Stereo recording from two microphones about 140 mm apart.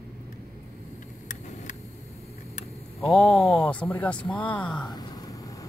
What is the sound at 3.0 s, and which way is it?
Speech, 5° left (ahead or behind).